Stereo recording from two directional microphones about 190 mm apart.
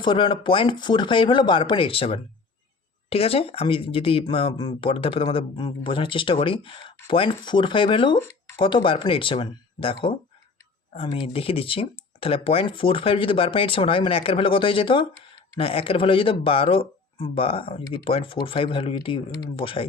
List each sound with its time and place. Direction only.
0.0 s speech: 25° left (ahead or behind)